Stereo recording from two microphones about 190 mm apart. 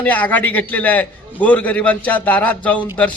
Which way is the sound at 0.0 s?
10° left (ahead or behind).